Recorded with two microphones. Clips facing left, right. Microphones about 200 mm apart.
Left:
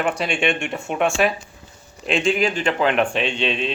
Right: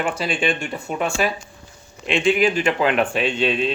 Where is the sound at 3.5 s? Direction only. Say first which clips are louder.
Right 3 dB; 45° right (ahead or behind).